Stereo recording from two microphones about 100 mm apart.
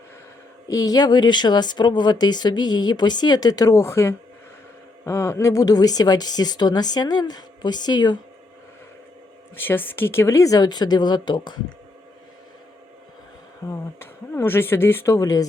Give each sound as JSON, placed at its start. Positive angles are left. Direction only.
{"t": 0.7, "sound": "speech", "side_deg": 40}
{"t": 9.6, "sound": "speech", "side_deg": 20}
{"t": 13.7, "sound": "speech", "side_deg": 25}